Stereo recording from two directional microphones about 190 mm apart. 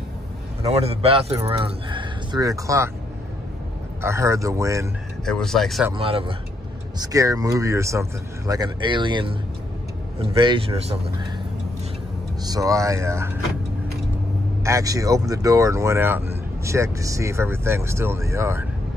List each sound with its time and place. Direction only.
0.7 s speech: 30° right (ahead or behind)
4.0 s speech: 15° right (ahead or behind)
5.2 s speech: centre (ahead or behind)
5.9 s speech: 30° right (ahead or behind)
7.0 s speech: 20° right (ahead or behind)
12.4 s speech: 15° right (ahead or behind)
14.6 s speech: 15° right (ahead or behind)